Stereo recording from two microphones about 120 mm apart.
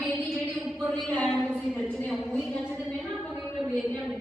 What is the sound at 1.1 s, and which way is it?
Speech, 10° left (ahead or behind).